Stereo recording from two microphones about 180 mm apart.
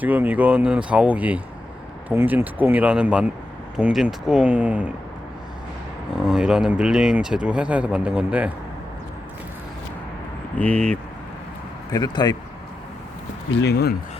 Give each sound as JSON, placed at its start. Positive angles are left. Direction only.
{"t": 0.0, "sound": "speech", "side_deg": -10}
{"t": 6.2, "sound": "speech", "side_deg": -5}
{"t": 10.6, "sound": "speech", "side_deg": 5}
{"t": 11.9, "sound": "speech", "side_deg": 20}
{"t": 13.5, "sound": "speech", "side_deg": 70}